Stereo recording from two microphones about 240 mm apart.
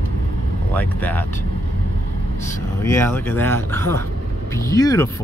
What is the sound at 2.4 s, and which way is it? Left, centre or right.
Speech, centre.